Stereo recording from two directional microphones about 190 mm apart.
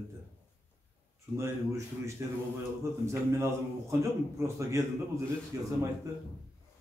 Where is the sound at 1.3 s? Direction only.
15° right (ahead or behind).